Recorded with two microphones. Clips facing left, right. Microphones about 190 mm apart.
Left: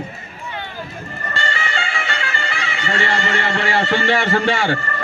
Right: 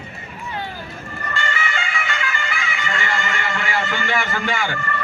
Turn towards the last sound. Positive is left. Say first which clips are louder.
# left 4 dB
turn(degrees=35)  # may be behind; listen again after turning